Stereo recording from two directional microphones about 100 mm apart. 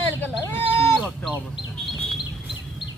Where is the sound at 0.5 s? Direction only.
25° left (ahead or behind).